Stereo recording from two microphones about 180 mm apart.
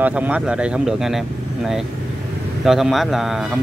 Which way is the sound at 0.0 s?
10° right (ahead or behind).